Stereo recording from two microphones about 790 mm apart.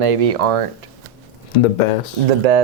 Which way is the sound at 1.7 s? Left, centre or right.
Left.